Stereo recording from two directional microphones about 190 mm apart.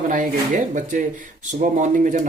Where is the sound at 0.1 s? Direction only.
45° right (ahead or behind).